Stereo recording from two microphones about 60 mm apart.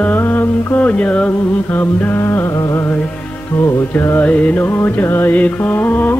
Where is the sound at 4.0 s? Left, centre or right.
Left.